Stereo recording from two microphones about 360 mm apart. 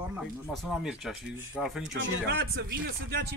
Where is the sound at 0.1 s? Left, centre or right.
Centre.